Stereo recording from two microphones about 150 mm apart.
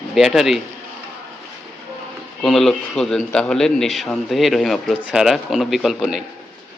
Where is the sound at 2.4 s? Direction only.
Centre (ahead or behind).